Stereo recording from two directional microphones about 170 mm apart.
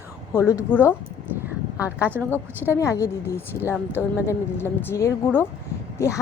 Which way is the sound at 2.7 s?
15° left (ahead or behind).